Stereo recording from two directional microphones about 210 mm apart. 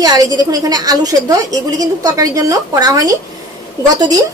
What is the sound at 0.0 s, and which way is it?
A woman's voice, 20° right (ahead or behind).